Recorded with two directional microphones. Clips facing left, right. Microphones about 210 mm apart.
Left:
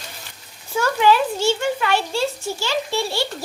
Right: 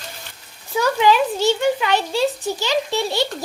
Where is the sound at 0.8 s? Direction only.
15° right (ahead or behind).